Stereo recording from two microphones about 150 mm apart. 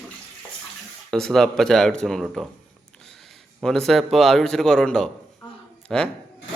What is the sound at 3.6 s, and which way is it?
A man's voice, 5° left (ahead or behind).